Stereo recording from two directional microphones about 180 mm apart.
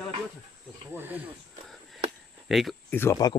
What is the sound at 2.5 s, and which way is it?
Speech, centre (ahead or behind).